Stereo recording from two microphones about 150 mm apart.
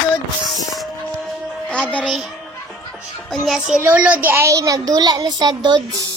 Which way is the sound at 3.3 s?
Centre (ahead or behind).